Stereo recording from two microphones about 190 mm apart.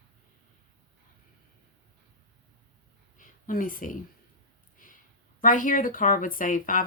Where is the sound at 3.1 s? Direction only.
45° left (ahead or behind).